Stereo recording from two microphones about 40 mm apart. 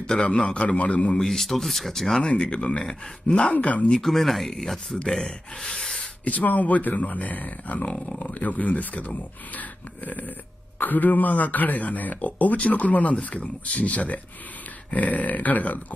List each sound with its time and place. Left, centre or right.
0.2 s a man's voice: left
1.2 s speech: centre
2.2 s speech: left
3.5 s a man's voice: left
4.0 s speech: centre
6.2 s a man's voice: left
10.8 s a man's voice: left